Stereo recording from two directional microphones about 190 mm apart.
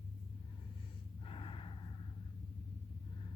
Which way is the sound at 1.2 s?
25° left (ahead or behind).